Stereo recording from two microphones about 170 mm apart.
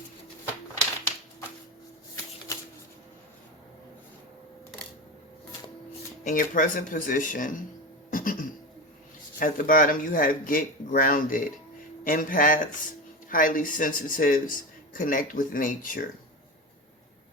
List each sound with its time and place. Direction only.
6.2 s a man's voice: 50° left (ahead or behind)
8.1 s cough: 55° left (ahead or behind)
9.4 s a man's voice: 55° left (ahead or behind)